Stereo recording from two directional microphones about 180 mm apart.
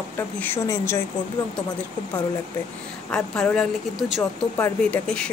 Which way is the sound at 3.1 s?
5° left (ahead or behind).